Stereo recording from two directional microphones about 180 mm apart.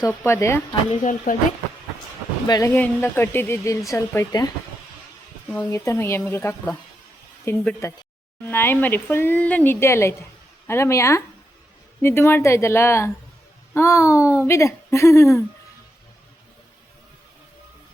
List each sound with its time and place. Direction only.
0.3 s speech: 15° left (ahead or behind)
0.9 s speech: 40° left (ahead or behind)
2.5 s speech: 15° left (ahead or behind)